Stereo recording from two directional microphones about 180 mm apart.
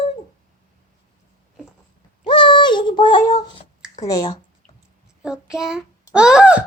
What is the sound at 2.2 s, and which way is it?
Synthetic singing, 25° left (ahead or behind).